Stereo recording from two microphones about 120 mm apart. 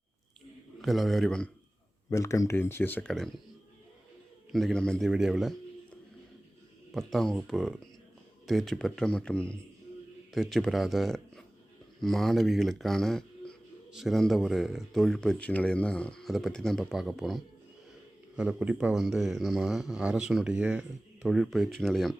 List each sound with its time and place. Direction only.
0.8 s a man's voice: centre (ahead or behind)
2.0 s speech: 25° left (ahead or behind)
4.5 s a man's voice: 5° left (ahead or behind)
6.9 s a man's voice: 5° left (ahead or behind)